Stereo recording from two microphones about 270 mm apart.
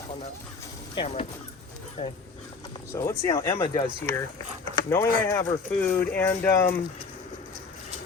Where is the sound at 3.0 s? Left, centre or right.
Centre.